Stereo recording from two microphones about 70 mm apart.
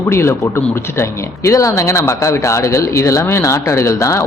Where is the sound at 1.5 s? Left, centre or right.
Left.